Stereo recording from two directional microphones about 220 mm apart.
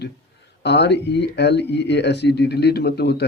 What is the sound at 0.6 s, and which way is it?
Speech, 50° left (ahead or behind).